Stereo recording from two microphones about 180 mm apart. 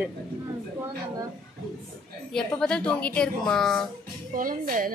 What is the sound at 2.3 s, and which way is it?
A woman's voice, 5° left (ahead or behind).